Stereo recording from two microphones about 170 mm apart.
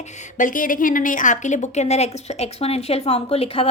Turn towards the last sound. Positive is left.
turn(degrees=35)  # may be behind; listen again after turning